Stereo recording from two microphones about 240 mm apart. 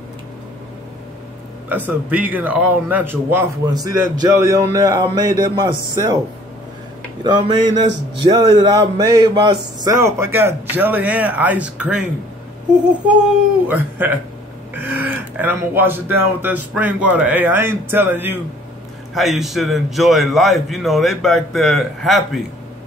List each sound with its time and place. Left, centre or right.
1.9 s a man's voice: centre
7.2 s a man's voice: centre